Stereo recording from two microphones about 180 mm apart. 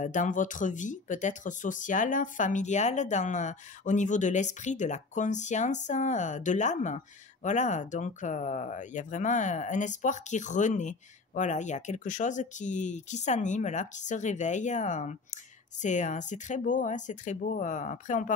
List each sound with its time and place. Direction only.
0.0 s speech: 45° left (ahead or behind)